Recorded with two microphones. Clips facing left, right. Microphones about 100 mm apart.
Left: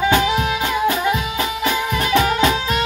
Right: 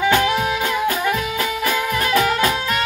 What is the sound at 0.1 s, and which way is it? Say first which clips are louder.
Music: even; 15° left (ahead or behind).